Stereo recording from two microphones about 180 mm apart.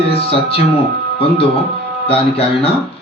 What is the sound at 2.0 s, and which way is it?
Speech, 35° left (ahead or behind).